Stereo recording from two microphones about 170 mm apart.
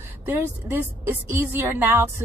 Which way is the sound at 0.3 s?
10° right (ahead or behind).